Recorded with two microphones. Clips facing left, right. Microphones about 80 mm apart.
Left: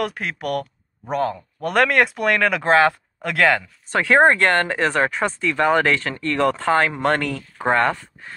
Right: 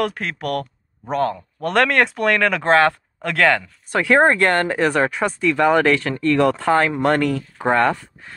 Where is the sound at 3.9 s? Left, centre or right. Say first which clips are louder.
Even; left.